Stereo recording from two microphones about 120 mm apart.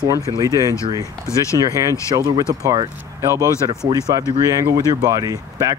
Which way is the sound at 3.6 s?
30° right (ahead or behind).